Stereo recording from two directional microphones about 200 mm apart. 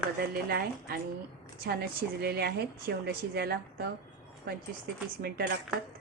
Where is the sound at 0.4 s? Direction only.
50° right (ahead or behind).